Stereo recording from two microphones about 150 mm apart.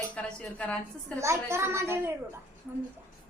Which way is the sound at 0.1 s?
10° left (ahead or behind).